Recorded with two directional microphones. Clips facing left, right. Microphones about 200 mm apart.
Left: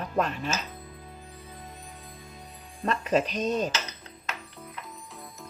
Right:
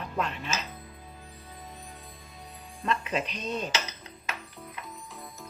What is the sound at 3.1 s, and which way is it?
Speech, 40° left (ahead or behind).